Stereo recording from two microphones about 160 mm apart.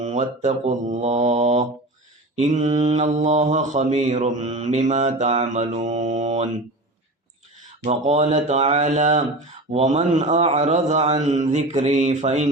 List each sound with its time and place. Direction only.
0.0 s mantra: 45° right (ahead or behind)
7.9 s mantra: 40° right (ahead or behind)